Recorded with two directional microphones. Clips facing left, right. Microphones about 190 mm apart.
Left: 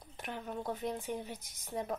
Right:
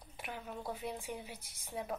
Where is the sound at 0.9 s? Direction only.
40° left (ahead or behind).